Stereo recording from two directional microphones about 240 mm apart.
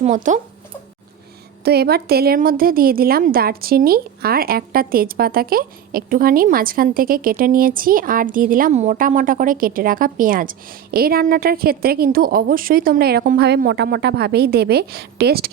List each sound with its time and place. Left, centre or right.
0.0 s a woman's voice: right
1.6 s a woman's voice: right